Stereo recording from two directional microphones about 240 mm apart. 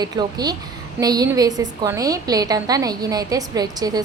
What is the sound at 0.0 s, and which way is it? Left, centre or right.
A woman's voice, centre.